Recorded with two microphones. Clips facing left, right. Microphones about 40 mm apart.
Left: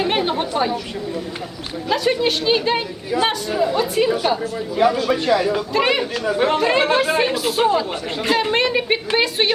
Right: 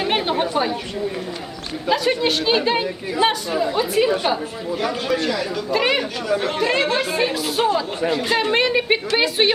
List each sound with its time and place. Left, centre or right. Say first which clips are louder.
0.0 s chatter: even; centre
1.9 s a woman's voice: even; centre
4.8 s speech: left 5 dB; centre
5.7 s a woman's voice: right 1 dB; centre
6.2 s speech: left 4 dB; left
7.3 s a woman's voice: left 2 dB; centre